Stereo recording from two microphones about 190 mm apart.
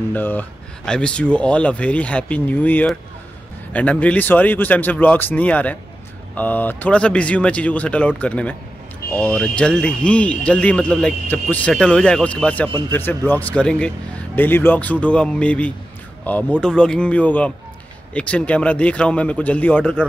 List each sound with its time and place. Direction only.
0.1 s speech: 10° left (ahead or behind)